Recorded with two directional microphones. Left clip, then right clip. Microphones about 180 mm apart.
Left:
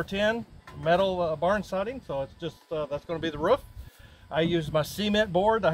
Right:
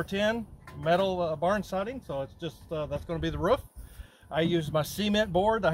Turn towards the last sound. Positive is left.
turn(degrees=10)  # may be behind; listen again after turning